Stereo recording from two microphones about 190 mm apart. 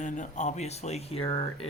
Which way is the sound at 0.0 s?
40° left (ahead or behind).